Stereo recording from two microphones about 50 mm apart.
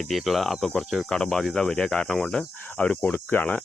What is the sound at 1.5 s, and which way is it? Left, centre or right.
Speech, centre.